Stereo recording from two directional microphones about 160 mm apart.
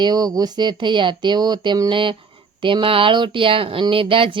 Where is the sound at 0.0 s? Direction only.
25° right (ahead or behind).